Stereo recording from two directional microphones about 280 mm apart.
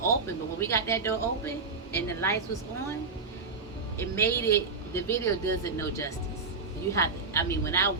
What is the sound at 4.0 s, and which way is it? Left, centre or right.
A woman's voice, centre.